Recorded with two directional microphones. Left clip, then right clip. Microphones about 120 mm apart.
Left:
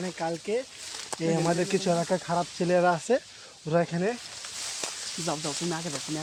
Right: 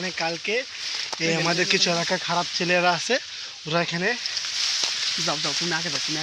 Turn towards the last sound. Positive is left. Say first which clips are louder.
# right 7 dB
turn(degrees=-10)  # may be behind; listen again after turning